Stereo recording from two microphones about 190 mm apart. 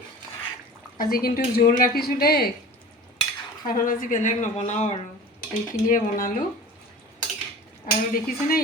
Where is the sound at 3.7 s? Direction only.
45° left (ahead or behind).